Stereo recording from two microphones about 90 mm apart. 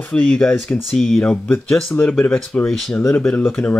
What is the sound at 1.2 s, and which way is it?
Speech, 15° left (ahead or behind).